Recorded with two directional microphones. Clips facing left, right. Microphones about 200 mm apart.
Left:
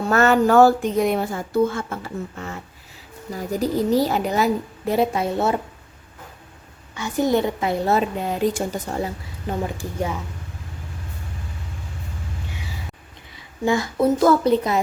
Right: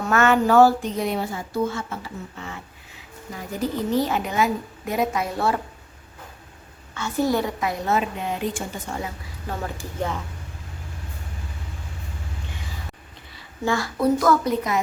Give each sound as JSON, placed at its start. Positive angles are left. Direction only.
{"t": 0.1, "sound": "speech", "side_deg": 40}
{"t": 3.3, "sound": "a woman's voice", "side_deg": 35}
{"t": 6.9, "sound": "a woman's voice", "side_deg": 15}
{"t": 9.5, "sound": "speech", "side_deg": 15}
{"t": 13.7, "sound": "a child's voice", "side_deg": 20}